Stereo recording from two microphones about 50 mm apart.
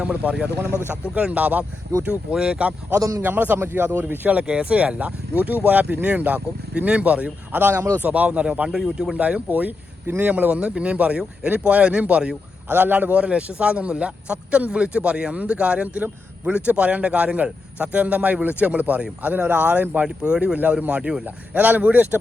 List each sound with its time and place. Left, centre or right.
0.0 s a man's voice: right
2.3 s a man's voice: centre
2.9 s a man's voice: right
3.2 s a man's voice: right
4.3 s a man's voice: right
7.6 s a man's voice: right
8.0 s a man's voice: right
8.7 s speech: centre
9.1 s a man's voice: right
9.5 s speech: right
10.6 s a man's voice: right
12.6 s a man's voice: right
20.1 s a man's voice: centre
21.2 s speech: right